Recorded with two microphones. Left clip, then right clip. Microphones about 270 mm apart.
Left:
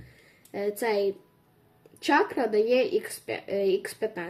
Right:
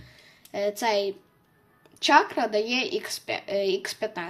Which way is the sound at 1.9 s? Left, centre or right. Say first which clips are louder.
Right 4 dB; centre.